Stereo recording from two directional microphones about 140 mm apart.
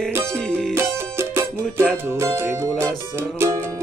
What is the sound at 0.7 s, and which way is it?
Music, 20° right (ahead or behind).